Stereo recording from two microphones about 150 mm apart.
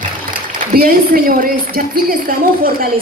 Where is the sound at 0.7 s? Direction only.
75° right (ahead or behind).